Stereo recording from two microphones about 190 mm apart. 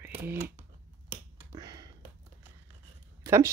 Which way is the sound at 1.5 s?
20° right (ahead or behind).